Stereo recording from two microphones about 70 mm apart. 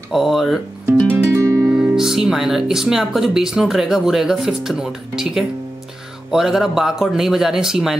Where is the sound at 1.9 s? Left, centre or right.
Centre.